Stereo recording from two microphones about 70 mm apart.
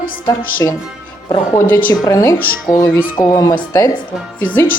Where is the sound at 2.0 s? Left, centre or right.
Left.